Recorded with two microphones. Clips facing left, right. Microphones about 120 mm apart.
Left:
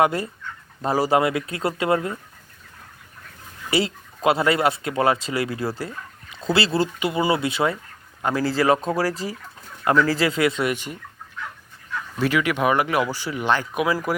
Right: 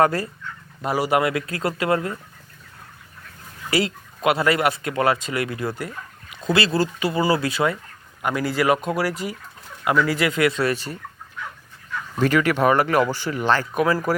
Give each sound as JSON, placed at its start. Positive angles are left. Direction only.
{"t": 0.0, "sound": "speech", "side_deg": 20}
{"t": 0.8, "sound": "speech", "side_deg": 35}
{"t": 3.7, "sound": "speech", "side_deg": 25}
{"t": 12.2, "sound": "speech", "side_deg": 10}